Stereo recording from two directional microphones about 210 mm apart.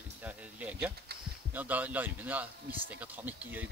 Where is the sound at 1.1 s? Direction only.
50° right (ahead or behind).